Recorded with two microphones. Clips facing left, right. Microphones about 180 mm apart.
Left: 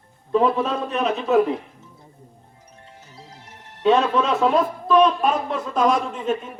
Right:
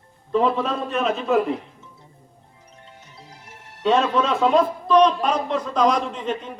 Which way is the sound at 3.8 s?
Centre (ahead or behind).